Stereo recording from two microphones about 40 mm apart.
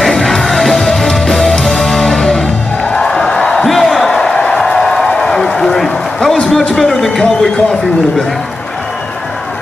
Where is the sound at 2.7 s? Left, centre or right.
Left.